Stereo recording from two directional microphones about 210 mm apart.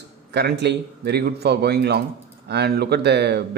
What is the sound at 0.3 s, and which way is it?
A man's voice, 50° right (ahead or behind).